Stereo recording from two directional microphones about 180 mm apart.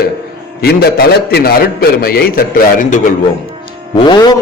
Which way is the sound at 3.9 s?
25° left (ahead or behind).